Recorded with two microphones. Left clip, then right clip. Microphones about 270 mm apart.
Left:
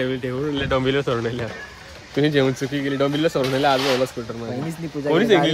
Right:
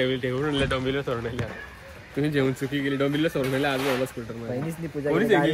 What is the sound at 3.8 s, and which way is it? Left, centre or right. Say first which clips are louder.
Speech: left 6 dB; left.